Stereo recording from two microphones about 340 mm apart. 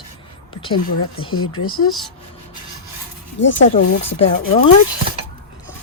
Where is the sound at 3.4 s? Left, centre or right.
Left.